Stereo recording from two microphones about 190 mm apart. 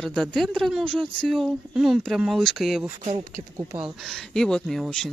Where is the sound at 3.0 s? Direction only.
40° right (ahead or behind).